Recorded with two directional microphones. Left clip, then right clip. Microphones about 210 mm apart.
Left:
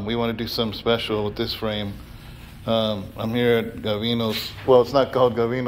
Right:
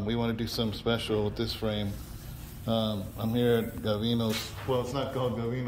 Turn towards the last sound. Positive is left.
turn(degrees=25)  # may be behind; listen again after turning